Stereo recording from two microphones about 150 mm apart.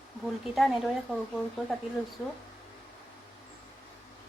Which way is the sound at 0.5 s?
Centre (ahead or behind).